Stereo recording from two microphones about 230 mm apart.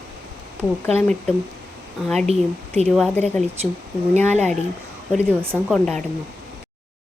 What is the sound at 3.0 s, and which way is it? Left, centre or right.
Speech, centre.